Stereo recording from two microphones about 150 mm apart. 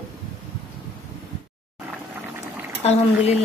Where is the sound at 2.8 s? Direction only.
45° left (ahead or behind).